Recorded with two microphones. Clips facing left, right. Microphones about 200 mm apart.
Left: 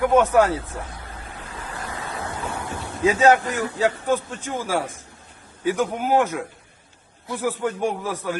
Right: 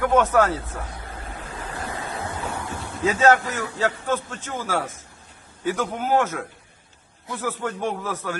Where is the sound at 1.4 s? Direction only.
30° right (ahead or behind).